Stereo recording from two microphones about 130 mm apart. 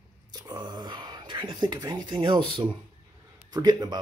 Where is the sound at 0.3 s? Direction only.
35° right (ahead or behind).